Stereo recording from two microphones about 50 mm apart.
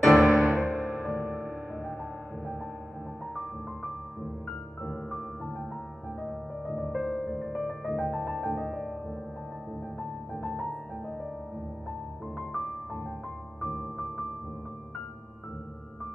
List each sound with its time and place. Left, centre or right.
0.0 s music: centre
0.4 s music: centre
0.9 s music: right
6.8 s music: centre
8.4 s music: centre
10.4 s music: centre
13.7 s music: centre